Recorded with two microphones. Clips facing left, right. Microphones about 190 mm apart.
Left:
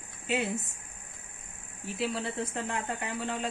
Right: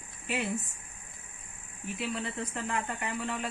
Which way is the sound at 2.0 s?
30° left (ahead or behind).